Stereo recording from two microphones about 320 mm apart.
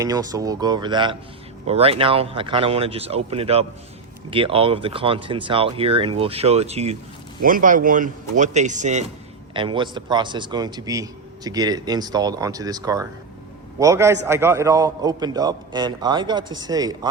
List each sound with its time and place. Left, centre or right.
0.0 s a man's voice: centre
16.4 s speech: right
16.6 s a man's voice: centre